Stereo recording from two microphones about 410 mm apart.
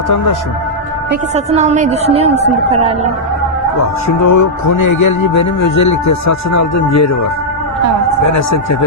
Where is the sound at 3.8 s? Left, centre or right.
Left.